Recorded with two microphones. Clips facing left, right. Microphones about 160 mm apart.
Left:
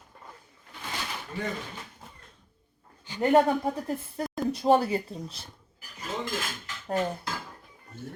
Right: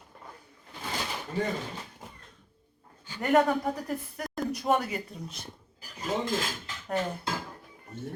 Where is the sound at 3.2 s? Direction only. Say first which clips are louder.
Left 2 dB; 25° left (ahead or behind).